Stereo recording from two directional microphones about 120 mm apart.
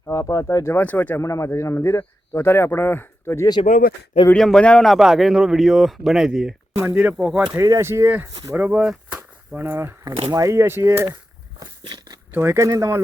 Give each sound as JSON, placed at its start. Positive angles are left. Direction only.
{"t": 0.0, "sound": "speech", "side_deg": 25}
{"t": 1.2, "sound": "speech", "side_deg": 25}
{"t": 3.7, "sound": "speech", "side_deg": 90}
{"t": 4.4, "sound": "speech", "side_deg": 5}
{"t": 7.5, "sound": "speech", "side_deg": -25}
{"t": 11.6, "sound": "a sound", "side_deg": -40}
{"t": 12.3, "sound": "speech", "side_deg": -20}